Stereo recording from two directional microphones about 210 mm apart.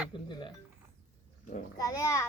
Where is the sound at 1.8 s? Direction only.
15° left (ahead or behind).